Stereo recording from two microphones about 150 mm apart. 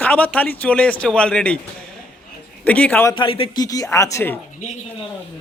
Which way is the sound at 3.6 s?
25° left (ahead or behind).